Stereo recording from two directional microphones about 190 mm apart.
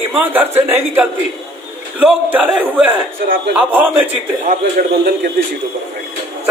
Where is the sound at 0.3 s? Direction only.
10° right (ahead or behind).